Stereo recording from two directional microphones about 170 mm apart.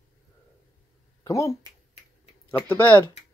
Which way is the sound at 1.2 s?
20° left (ahead or behind).